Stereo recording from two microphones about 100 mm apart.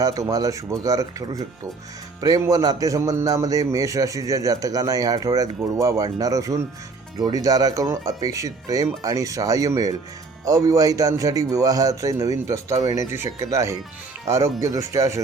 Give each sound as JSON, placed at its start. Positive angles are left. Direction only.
{"t": 0.0, "sound": "a man's voice", "side_deg": -35}
{"t": 2.5, "sound": "a man's voice", "side_deg": -40}